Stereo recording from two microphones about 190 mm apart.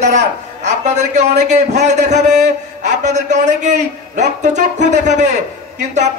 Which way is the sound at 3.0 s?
40° right (ahead or behind).